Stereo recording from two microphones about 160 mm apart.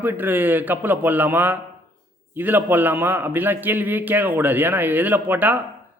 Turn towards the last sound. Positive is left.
turn(degrees=-10)  # may be behind; listen again after turning